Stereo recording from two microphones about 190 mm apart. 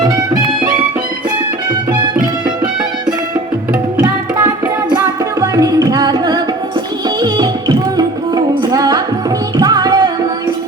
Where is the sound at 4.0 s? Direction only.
20° right (ahead or behind).